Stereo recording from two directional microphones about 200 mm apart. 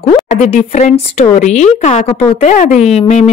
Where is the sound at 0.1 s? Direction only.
35° left (ahead or behind).